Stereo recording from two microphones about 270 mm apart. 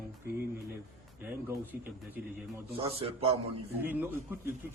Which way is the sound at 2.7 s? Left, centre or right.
Centre.